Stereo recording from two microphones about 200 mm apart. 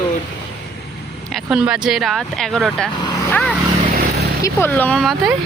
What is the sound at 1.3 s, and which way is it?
Speech, centre (ahead or behind).